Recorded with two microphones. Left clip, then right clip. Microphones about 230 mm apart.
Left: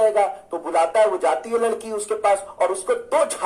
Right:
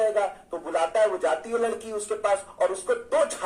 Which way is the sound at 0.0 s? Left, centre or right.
Left.